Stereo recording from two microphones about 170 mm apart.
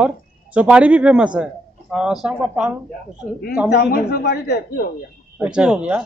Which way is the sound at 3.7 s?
65° left (ahead or behind).